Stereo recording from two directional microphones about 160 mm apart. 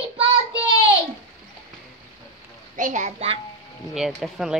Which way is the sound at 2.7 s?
50° right (ahead or behind).